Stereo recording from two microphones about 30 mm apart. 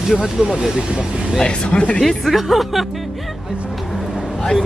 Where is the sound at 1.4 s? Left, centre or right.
Left.